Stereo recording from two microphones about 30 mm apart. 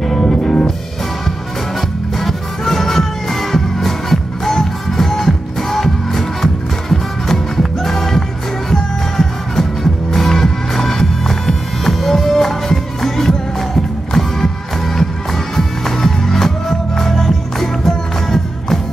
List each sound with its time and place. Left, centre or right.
0.0 s music: centre
0.3 s music: left
1.8 s music: centre